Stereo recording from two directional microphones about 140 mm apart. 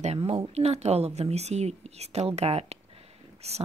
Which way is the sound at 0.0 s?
50° right (ahead or behind).